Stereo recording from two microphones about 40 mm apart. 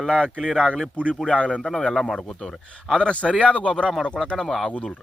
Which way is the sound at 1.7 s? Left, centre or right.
Left.